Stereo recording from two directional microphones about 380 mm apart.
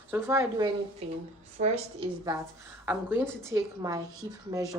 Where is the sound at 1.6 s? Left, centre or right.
Centre.